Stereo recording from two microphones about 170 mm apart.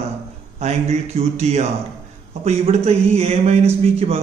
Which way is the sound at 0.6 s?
40° right (ahead or behind).